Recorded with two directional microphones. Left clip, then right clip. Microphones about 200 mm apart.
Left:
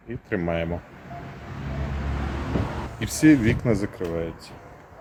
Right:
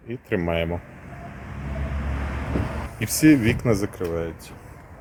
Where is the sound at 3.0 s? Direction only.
40° right (ahead or behind).